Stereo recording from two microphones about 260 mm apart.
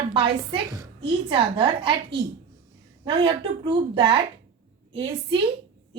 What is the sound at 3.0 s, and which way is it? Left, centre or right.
A woman's voice, centre.